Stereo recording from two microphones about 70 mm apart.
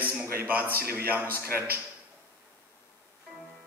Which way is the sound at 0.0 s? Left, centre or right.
Right.